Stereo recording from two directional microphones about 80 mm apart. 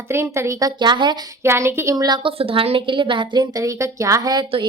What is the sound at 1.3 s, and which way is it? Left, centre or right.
Speech, right.